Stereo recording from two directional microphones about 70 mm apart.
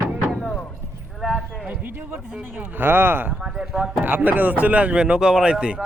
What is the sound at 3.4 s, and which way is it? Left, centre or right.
Speech, centre.